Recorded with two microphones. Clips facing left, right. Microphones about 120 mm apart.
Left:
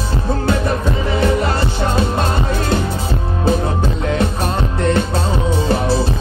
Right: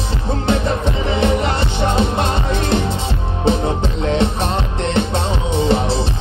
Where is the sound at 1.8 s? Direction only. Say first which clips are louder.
Right 2 dB; 25° right (ahead or behind).